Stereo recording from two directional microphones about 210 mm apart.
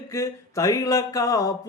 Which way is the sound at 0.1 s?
15° left (ahead or behind).